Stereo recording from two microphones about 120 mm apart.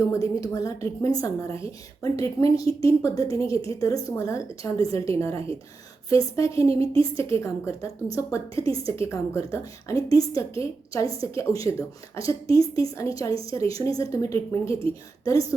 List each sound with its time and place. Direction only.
0.1 s a woman's voice: 30° left (ahead or behind)